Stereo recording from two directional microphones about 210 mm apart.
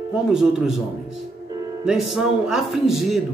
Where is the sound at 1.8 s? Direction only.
Centre (ahead or behind).